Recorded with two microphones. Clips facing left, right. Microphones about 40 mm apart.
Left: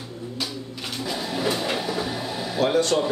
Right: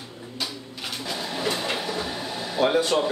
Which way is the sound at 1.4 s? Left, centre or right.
Centre.